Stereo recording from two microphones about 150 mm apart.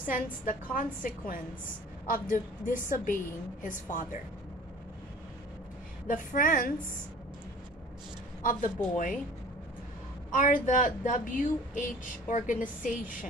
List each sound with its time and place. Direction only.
0.0 s speech: 65° left (ahead or behind)
6.0 s speech: 60° left (ahead or behind)
8.4 s speech: 60° left (ahead or behind)
10.3 s speech: 60° left (ahead or behind)